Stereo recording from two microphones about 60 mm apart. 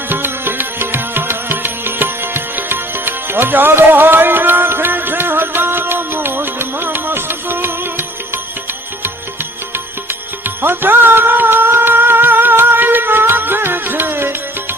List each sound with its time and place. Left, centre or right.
0.1 s music: right
9.7 s music: right